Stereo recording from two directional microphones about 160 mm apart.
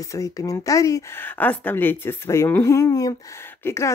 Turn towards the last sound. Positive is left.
turn(degrees=15)  # may be behind; listen again after turning